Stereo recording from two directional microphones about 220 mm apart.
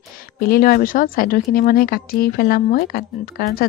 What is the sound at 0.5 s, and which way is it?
Speech, 40° left (ahead or behind).